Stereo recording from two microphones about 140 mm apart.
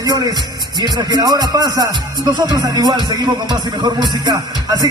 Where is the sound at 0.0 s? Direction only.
30° right (ahead or behind).